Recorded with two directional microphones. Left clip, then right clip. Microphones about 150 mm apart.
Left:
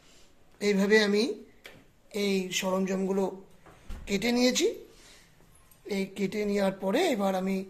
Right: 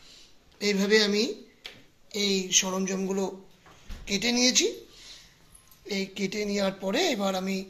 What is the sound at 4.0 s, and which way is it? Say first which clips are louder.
Speech: right 1 dB; 15° left (ahead or behind).